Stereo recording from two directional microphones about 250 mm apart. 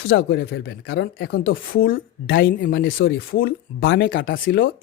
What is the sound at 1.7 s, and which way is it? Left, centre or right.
Speech, left.